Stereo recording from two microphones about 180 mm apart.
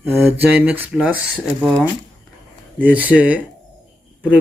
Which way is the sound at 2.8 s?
10° right (ahead or behind).